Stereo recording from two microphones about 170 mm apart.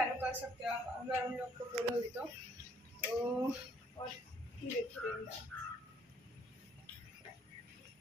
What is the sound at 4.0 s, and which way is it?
Speech, 25° left (ahead or behind).